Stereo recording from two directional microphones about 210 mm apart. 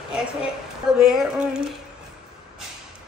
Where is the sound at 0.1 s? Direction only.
5° right (ahead or behind).